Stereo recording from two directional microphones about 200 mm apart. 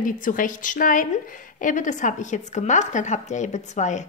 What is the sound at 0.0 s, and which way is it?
A woman's voice, 40° left (ahead or behind).